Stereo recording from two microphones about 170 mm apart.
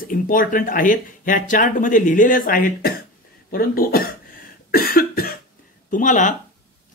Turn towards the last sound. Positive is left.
turn(degrees=50)  # may be behind; listen again after turning